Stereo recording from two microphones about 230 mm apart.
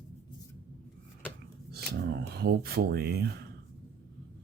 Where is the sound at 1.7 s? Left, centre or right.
Right.